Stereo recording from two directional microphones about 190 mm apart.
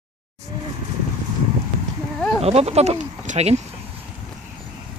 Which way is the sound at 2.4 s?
35° right (ahead or behind).